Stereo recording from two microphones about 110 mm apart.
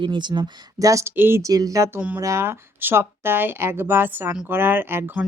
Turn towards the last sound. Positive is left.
turn(degrees=-20)  # may be behind; listen again after turning